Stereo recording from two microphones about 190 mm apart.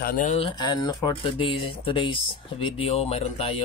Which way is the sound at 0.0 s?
45° left (ahead or behind).